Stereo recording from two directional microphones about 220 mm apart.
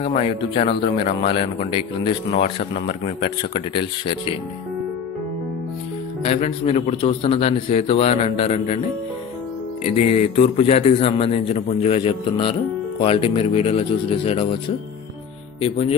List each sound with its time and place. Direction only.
0.0 s a man's voice: 25° left (ahead or behind)
6.2 s a man's voice: 30° left (ahead or behind)
9.8 s a man's voice: 30° left (ahead or behind)
15.6 s a man's voice: 30° left (ahead or behind)